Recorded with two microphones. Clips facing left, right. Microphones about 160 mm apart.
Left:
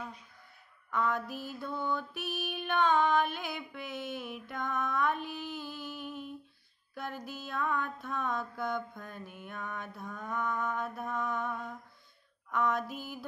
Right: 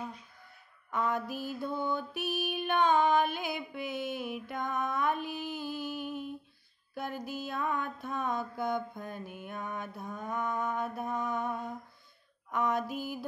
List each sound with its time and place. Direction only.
0.9 s mantra: 5° right (ahead or behind)